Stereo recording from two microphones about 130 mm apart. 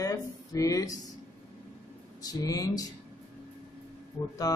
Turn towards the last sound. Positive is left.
turn(degrees=30)  # may be behind; listen again after turning